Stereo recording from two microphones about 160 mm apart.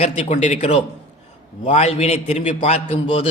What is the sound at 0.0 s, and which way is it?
A man's voice, 45° left (ahead or behind).